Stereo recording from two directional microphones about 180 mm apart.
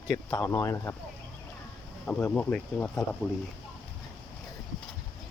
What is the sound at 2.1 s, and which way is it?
Speech, 10° left (ahead or behind).